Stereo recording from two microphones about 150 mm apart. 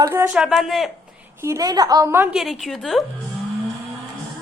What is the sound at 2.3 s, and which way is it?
Speech, centre (ahead or behind).